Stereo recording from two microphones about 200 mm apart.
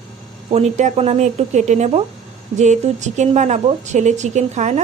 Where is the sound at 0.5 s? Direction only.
35° right (ahead or behind).